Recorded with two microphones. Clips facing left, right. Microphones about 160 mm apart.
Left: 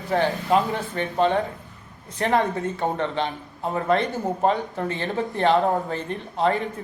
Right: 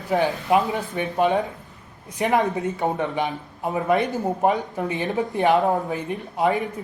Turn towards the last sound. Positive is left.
turn(degrees=-15)  # may be behind; listen again after turning